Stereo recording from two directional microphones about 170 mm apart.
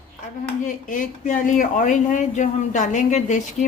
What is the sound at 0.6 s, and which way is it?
Speech, 50° left (ahead or behind).